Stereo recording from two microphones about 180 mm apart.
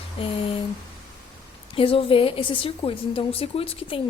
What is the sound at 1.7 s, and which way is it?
A woman's voice, 30° left (ahead or behind).